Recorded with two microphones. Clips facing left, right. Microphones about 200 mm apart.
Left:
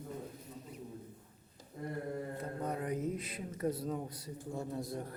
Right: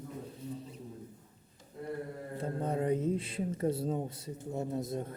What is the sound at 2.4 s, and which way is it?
Speech, 30° right (ahead or behind).